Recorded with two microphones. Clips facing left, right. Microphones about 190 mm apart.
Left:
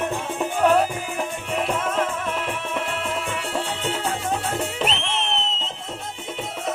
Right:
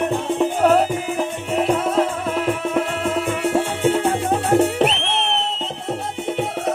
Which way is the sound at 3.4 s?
55° right (ahead or behind).